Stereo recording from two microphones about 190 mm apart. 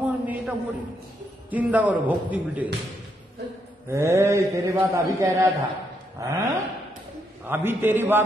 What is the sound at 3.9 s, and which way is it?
A man's voice, 15° right (ahead or behind).